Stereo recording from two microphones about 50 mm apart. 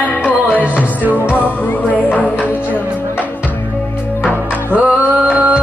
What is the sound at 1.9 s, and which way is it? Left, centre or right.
Music, left.